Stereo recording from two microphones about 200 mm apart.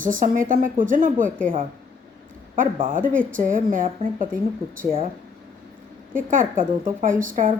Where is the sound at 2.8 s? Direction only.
45° right (ahead or behind).